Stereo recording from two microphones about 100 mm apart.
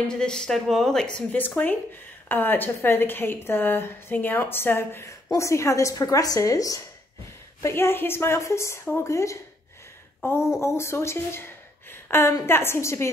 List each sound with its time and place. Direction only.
0.1 s a woman's voice: 5° left (ahead or behind); by 6.8 s 35° left (ahead or behind)
7.6 s a woman's voice: 25° left (ahead or behind)
10.6 s a woman's voice: 25° left (ahead or behind)